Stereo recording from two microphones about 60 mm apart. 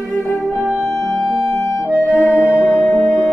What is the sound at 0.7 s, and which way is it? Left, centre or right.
Music, centre.